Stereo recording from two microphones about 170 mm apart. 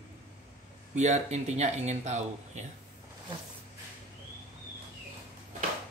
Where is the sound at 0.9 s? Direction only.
45° right (ahead or behind).